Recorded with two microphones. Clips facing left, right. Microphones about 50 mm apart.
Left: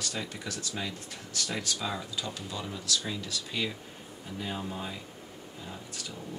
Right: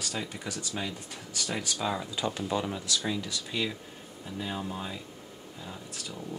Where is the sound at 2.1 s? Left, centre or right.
Right.